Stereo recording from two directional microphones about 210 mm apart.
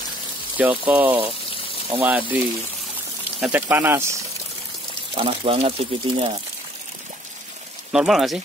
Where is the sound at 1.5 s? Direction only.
25° left (ahead or behind).